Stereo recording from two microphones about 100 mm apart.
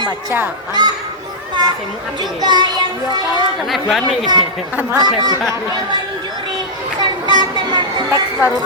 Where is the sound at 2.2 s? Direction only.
45° right (ahead or behind).